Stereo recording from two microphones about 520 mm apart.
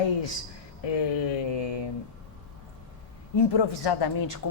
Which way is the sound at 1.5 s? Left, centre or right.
Left.